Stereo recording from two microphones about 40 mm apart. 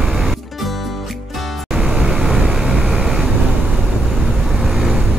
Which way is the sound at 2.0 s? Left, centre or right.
Centre.